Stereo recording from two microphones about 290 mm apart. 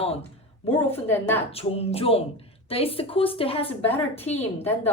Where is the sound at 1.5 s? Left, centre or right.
Centre.